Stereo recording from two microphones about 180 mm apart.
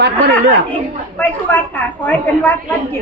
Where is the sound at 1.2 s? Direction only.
10° left (ahead or behind).